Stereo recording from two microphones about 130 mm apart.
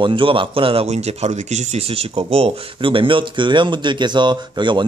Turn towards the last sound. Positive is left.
turn(degrees=-35)  # may be behind; listen again after turning